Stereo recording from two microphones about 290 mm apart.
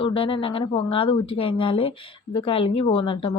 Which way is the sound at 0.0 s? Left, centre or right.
Centre.